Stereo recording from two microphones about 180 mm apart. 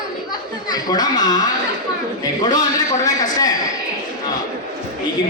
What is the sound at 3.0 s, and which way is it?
Speech, 20° left (ahead or behind).